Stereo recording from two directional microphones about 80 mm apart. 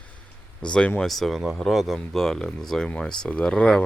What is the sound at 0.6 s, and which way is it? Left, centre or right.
Speech, centre.